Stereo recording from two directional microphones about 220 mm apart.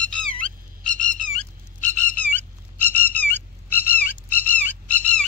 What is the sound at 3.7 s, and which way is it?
Frog, 10° left (ahead or behind).